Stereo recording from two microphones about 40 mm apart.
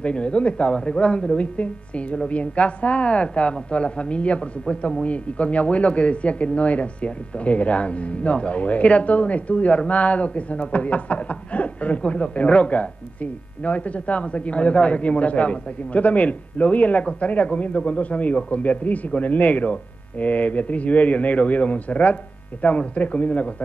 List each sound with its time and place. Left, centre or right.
0.0 s speech: left